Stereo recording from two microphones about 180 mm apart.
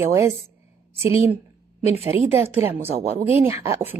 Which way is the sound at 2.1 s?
30° left (ahead or behind).